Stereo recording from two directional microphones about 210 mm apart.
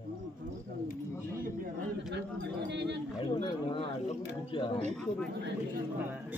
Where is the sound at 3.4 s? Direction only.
25° left (ahead or behind).